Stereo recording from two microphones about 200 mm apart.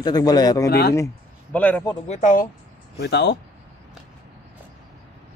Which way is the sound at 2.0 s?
35° left (ahead or behind).